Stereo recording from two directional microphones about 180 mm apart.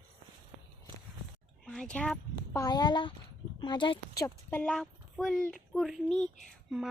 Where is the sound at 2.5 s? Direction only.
20° left (ahead or behind).